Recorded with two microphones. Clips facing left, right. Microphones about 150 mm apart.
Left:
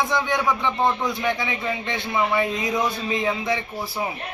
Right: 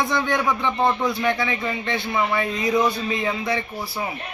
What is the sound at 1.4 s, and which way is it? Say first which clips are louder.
A man's voice: right 2 dB; 15° left (ahead or behind).